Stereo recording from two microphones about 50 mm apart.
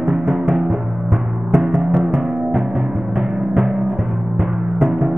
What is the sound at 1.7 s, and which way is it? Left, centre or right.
Music, centre.